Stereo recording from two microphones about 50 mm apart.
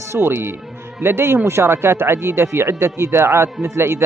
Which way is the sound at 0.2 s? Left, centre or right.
Right.